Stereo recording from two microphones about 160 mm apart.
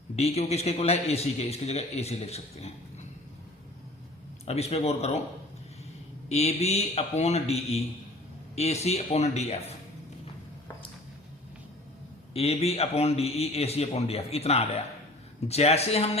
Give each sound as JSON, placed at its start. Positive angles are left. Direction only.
{"t": 0.2, "sound": "a man's voice", "side_deg": 40}
{"t": 4.4, "sound": "a man's voice", "side_deg": 40}
{"t": 6.2, "sound": "a man's voice", "side_deg": 40}
{"t": 12.3, "sound": "a man's voice", "side_deg": 40}